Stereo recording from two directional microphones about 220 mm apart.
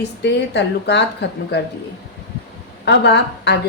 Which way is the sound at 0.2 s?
50° left (ahead or behind).